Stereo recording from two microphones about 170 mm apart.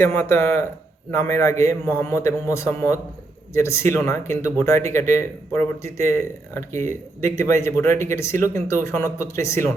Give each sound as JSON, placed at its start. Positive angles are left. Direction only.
{"t": 0.0, "sound": "speech", "side_deg": 15}
{"t": 7.9, "sound": "speech", "side_deg": -45}
{"t": 8.1, "sound": "speech", "side_deg": 15}